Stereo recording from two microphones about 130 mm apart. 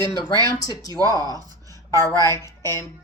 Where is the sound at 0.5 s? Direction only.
30° left (ahead or behind).